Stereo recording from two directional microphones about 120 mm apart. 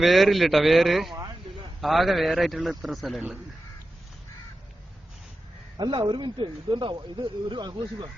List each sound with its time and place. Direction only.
0.0 s a man's voice: centre (ahead or behind)
5.7 s speech: 40° right (ahead or behind)